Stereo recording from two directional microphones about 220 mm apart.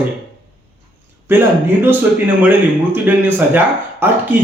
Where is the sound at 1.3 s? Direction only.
10° right (ahead or behind).